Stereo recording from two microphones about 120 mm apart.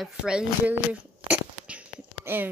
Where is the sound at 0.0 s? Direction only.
5° right (ahead or behind).